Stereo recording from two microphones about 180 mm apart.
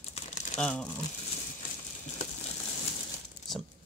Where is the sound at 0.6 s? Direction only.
5° left (ahead or behind).